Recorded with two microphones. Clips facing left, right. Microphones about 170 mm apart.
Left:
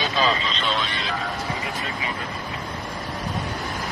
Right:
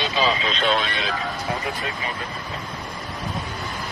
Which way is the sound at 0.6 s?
55° right (ahead or behind).